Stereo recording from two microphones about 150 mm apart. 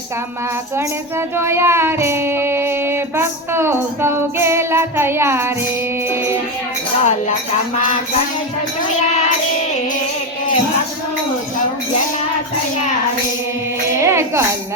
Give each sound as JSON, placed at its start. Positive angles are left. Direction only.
{"t": 1.4, "sound": "child singing", "side_deg": -15}
{"t": 7.0, "sound": "speech", "side_deg": 50}
{"t": 14.0, "sound": "music", "side_deg": -20}